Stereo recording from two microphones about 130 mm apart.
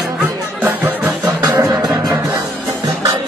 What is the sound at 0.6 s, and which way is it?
Music, 15° right (ahead or behind).